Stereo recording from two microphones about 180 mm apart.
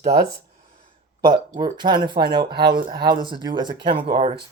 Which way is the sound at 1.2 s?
25° right (ahead or behind).